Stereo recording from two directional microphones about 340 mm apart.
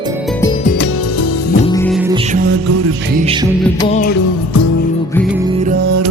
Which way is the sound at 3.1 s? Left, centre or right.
Centre.